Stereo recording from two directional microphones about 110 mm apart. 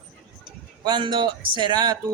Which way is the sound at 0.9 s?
45° right (ahead or behind).